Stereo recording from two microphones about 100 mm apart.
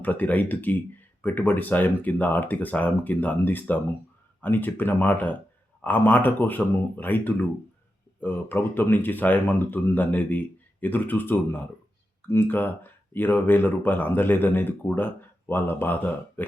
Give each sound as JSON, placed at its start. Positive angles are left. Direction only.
{"t": 0.0, "sound": "speech", "side_deg": 15}